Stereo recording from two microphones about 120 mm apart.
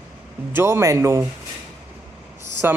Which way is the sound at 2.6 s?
20° right (ahead or behind).